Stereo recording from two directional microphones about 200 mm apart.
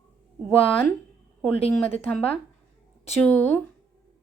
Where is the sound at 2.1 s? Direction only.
5° left (ahead or behind).